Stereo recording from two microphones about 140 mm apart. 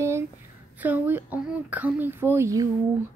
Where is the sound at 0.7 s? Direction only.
10° right (ahead or behind).